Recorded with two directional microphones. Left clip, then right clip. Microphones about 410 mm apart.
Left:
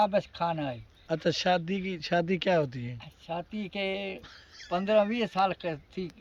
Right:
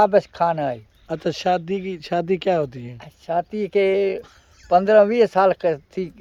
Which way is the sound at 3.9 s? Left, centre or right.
Centre.